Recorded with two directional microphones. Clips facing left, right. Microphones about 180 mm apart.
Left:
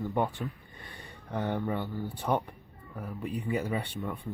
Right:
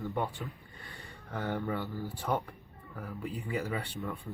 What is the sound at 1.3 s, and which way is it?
Speech, 20° left (ahead or behind).